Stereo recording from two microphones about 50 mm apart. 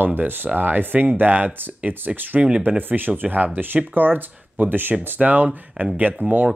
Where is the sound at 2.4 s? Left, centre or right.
Centre.